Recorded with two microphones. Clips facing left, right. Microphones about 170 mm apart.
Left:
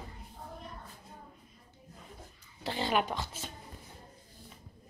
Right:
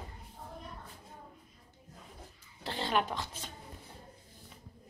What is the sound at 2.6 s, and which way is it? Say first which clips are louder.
Speech: left 2 dB; 5° left (ahead or behind).